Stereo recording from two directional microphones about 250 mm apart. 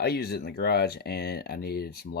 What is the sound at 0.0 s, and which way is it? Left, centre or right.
Speech, left.